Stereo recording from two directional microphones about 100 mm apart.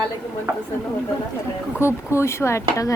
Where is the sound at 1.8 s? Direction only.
25° left (ahead or behind).